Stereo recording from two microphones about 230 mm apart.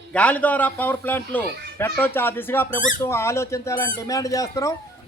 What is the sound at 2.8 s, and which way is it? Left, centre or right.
Speech, left.